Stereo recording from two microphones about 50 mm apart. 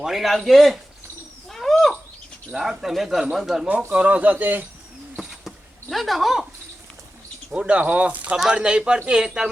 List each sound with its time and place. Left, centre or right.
0.0 s a man's voice: centre
1.5 s bird: centre
2.5 s a man's voice: centre
3.9 s a man's voice: right
5.1 s a sound: centre
7.5 s speech: right
8.4 s speech: centre